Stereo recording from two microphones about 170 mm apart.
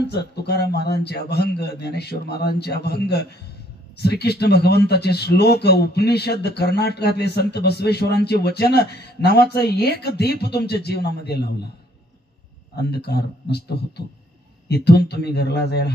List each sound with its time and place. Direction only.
0.0 s a man's voice: 75° left (ahead or behind)
12.7 s a man's voice: 75° left (ahead or behind)